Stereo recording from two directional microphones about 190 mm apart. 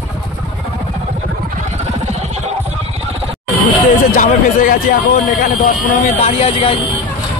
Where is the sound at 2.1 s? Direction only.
35° right (ahead or behind).